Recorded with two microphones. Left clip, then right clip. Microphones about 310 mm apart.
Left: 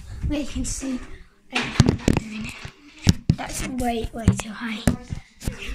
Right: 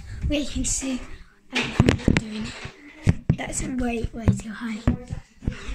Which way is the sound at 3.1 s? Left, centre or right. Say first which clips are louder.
Left 3 dB; left.